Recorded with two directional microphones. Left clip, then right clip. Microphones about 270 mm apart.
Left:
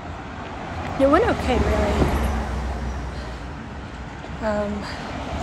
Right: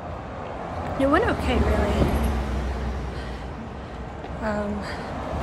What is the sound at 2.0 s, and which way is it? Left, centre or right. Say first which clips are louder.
Vehicle: left 2 dB; left.